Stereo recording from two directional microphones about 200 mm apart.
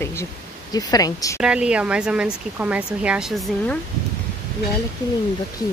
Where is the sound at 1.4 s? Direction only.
5° right (ahead or behind).